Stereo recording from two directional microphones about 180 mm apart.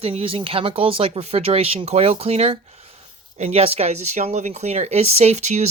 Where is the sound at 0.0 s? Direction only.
30° right (ahead or behind).